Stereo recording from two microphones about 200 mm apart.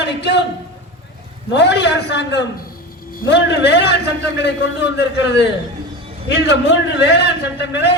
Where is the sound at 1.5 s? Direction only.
60° left (ahead or behind).